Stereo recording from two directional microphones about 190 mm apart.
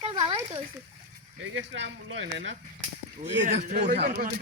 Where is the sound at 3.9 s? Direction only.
55° right (ahead or behind).